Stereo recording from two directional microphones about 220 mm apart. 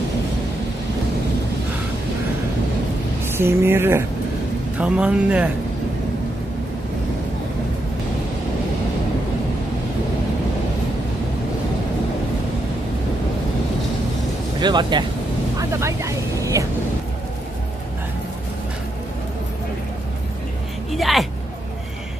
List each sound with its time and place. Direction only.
3.3 s a sound: 10° right (ahead or behind)
4.7 s speech: 5° right (ahead or behind)
14.6 s speech: 20° right (ahead or behind)
15.5 s vehicle: 15° right (ahead or behind)
20.9 s speech: centre (ahead or behind)